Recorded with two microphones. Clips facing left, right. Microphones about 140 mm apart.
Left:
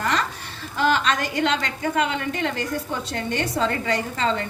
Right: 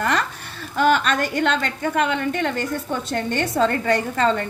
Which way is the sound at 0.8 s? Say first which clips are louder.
Right 3 dB; 50° right (ahead or behind).